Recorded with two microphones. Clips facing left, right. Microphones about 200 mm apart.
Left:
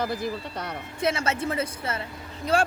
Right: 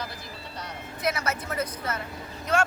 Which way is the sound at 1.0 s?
25° left (ahead or behind).